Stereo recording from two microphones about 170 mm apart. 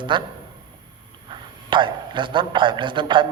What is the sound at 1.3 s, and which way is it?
A woman's voice, 30° right (ahead or behind).